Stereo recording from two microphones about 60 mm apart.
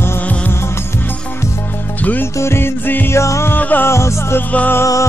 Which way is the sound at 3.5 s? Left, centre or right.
Left.